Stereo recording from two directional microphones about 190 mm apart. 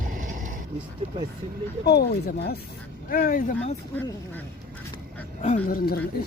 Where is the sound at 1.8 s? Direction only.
55° left (ahead or behind).